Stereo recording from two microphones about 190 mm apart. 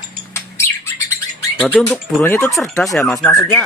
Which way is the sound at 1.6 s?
5° left (ahead or behind).